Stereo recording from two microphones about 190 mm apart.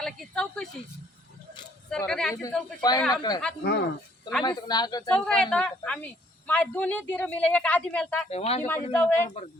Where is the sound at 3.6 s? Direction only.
60° left (ahead or behind).